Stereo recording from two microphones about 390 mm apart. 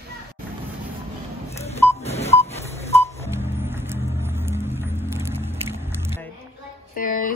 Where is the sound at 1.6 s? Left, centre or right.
Centre.